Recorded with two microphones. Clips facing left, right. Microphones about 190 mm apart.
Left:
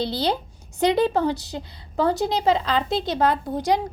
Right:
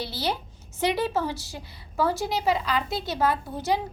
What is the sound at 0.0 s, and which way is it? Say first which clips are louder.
A woman's voice: left 6 dB; 20° left (ahead or behind).